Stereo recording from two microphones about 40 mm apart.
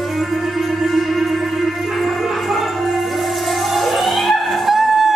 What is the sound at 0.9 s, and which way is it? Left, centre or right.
Music, centre.